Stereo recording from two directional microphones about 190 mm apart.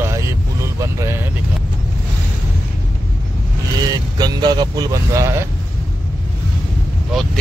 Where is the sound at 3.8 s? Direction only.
20° right (ahead or behind).